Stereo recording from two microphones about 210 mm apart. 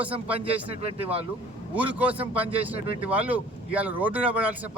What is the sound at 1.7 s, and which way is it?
Speech, 5° right (ahead or behind).